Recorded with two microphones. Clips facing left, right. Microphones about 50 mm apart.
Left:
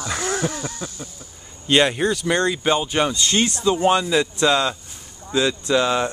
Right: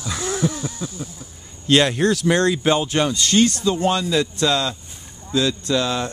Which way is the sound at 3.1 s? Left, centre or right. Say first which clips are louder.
Right 3 dB; left.